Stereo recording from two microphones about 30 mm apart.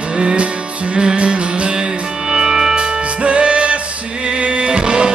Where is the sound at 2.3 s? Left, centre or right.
Centre.